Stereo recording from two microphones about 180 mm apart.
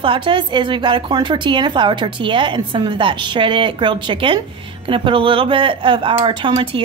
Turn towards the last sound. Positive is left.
turn(degrees=-30)  # may be behind; listen again after turning